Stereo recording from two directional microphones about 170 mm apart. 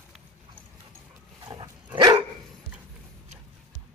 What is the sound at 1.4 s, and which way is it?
Dog, 20° right (ahead or behind).